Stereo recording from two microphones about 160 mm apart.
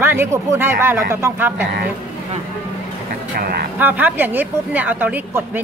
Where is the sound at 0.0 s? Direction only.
15° right (ahead or behind).